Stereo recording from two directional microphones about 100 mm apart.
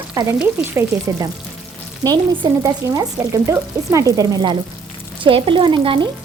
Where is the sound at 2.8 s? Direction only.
30° right (ahead or behind).